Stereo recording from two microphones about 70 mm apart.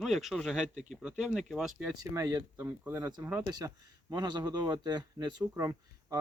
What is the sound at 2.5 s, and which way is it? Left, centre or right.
Speech, right.